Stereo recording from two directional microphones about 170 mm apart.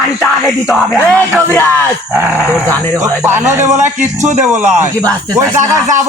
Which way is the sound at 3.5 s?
15° right (ahead or behind).